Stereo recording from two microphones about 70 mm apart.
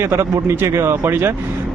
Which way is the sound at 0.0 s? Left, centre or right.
Right.